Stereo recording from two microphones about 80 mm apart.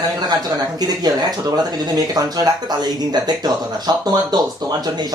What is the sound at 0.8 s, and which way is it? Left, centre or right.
Speech, right.